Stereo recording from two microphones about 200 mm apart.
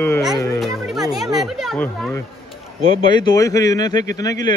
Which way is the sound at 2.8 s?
20° left (ahead or behind).